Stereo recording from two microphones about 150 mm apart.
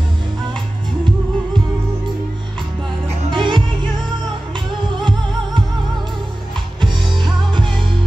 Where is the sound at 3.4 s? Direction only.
35° right (ahead or behind).